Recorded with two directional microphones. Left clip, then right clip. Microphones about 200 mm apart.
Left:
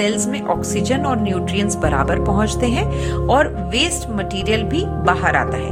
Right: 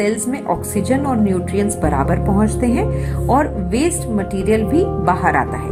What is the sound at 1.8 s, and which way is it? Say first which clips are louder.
A woman's voice: even; 35° left (ahead or behind).